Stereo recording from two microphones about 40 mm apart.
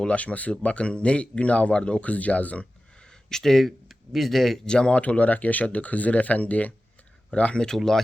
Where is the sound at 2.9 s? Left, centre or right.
Centre.